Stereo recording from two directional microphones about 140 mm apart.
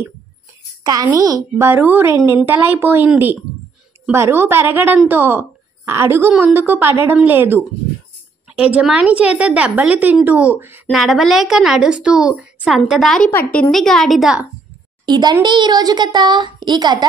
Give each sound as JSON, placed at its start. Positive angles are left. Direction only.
{"t": 1.1, "sound": "a woman's voice", "side_deg": -25}
{"t": 8.7, "sound": "a woman's voice", "side_deg": -10}
{"t": 10.9, "sound": "a woman's voice", "side_deg": 0}
{"t": 15.0, "sound": "a child's voice", "side_deg": -30}